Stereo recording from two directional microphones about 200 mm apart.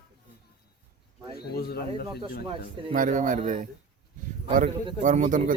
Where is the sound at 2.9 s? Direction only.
40° right (ahead or behind).